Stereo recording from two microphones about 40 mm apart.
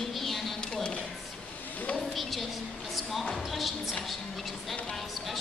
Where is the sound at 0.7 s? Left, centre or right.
Left.